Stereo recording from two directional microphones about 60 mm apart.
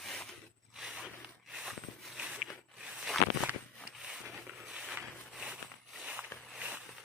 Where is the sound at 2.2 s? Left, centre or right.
Centre.